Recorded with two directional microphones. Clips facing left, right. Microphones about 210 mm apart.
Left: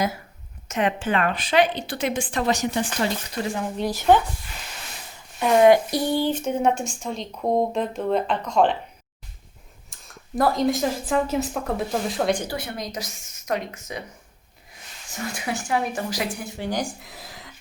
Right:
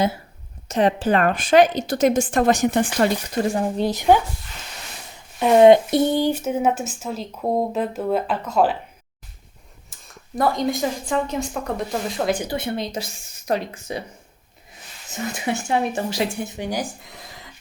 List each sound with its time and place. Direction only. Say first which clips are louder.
0.7 s a woman's voice: right 5 dB; 35° right (ahead or behind)
3.8 s speech: even; 15° right (ahead or behind)
5.4 s speech: right 4 dB; 20° right (ahead or behind); by 8.8 s 5° right (ahead or behind)
9.9 s speech: left 2 dB; centre (ahead or behind)
12.4 s speech: right 5 dB; 25° right (ahead or behind)
15.1 s speech: right 4 dB; 25° right (ahead or behind)
16.8 s speech: even; centre (ahead or behind)